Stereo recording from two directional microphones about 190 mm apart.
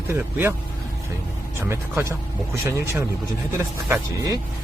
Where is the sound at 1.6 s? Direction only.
15° right (ahead or behind).